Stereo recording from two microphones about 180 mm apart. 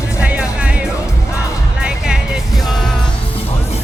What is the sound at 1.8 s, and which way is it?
Music, 5° right (ahead or behind).